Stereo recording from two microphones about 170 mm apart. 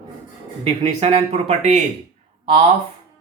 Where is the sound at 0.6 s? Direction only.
35° right (ahead or behind).